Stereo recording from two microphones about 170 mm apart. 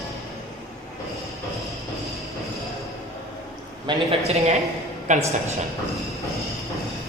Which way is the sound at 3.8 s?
35° right (ahead or behind).